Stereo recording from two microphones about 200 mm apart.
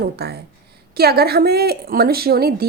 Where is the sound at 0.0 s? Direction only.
55° right (ahead or behind).